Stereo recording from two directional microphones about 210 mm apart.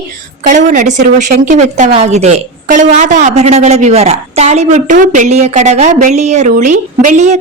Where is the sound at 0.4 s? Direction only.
35° right (ahead or behind).